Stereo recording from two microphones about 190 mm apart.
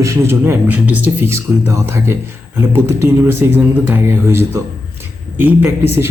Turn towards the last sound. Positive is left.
turn(degrees=-10)  # may be behind; listen again after turning